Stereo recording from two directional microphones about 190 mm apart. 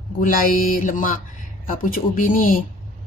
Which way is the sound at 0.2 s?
45° left (ahead or behind).